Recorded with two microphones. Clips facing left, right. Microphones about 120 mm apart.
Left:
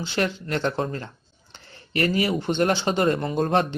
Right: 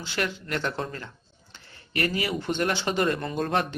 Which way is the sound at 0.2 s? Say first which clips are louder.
Left 4 dB; 30° left (ahead or behind).